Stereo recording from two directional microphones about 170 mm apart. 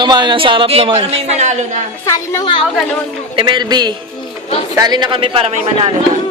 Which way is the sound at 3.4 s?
25° right (ahead or behind).